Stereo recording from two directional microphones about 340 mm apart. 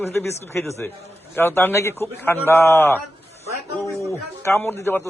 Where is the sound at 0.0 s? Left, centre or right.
Centre.